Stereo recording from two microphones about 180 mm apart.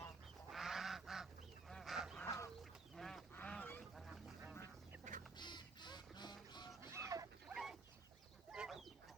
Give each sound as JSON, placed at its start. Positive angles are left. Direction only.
{"t": 0.5, "sound": "goose", "side_deg": 0}
{"t": 2.2, "sound": "chicken", "side_deg": 15}
{"t": 2.9, "sound": "duck", "side_deg": 0}
{"t": 4.0, "sound": "duck", "side_deg": -5}
{"t": 5.4, "sound": "duck", "side_deg": 25}
{"t": 6.8, "sound": "a sound", "side_deg": -15}
{"t": 7.4, "sound": "a sound", "side_deg": 0}
{"t": 8.5, "sound": "duck", "side_deg": -5}